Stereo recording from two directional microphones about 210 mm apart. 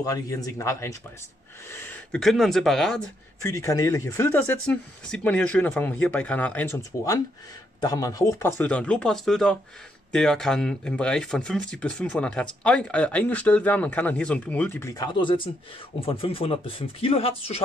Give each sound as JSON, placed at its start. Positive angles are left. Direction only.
{"t": 0.0, "sound": "speech", "side_deg": 15}
{"t": 3.4, "sound": "speech", "side_deg": 15}